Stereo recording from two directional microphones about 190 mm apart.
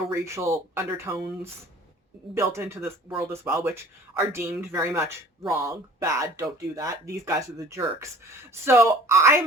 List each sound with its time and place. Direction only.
0.1 s speech: 15° right (ahead or behind)
2.3 s speech: 15° right (ahead or behind)